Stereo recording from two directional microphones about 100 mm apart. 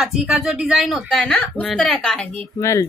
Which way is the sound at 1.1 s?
10° left (ahead or behind).